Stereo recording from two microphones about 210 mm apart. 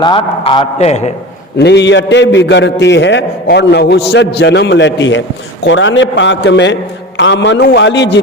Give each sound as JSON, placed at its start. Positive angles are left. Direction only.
{"t": 0.0, "sound": "a man's voice", "side_deg": 25}
{"t": 1.5, "sound": "a man's voice", "side_deg": 55}